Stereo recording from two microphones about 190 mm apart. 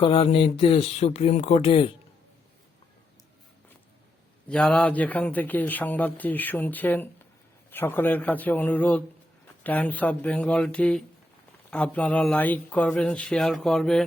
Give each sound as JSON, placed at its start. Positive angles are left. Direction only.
{"t": 0.0, "sound": "speech", "side_deg": 30}
{"t": 4.4, "sound": "a man's voice", "side_deg": 5}